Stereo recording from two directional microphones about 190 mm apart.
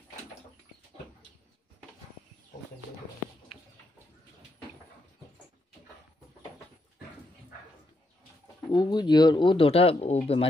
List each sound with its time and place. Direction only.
8.7 s speech: 20° left (ahead or behind)